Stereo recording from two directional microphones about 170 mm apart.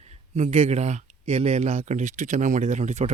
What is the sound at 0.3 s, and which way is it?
Speech, 40° right (ahead or behind).